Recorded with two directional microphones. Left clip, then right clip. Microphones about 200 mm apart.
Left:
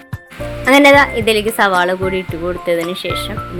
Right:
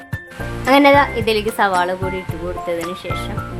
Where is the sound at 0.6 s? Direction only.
10° left (ahead or behind).